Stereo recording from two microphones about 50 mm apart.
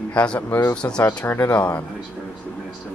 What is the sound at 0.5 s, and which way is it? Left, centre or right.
Speech, left.